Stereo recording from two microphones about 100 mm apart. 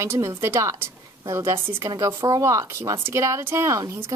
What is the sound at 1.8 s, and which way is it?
Speech, 35° right (ahead or behind).